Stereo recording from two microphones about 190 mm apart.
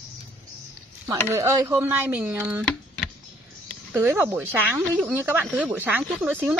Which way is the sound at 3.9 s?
10° right (ahead or behind).